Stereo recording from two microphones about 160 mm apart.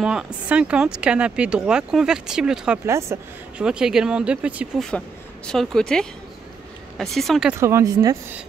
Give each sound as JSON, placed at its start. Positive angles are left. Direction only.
{"t": 0.0, "sound": "speech", "side_deg": -5}
{"t": 2.9, "sound": "speech", "side_deg": -15}
{"t": 3.5, "sound": "speech", "side_deg": -5}
{"t": 5.5, "sound": "speech", "side_deg": 5}
{"t": 7.5, "sound": "speech", "side_deg": -15}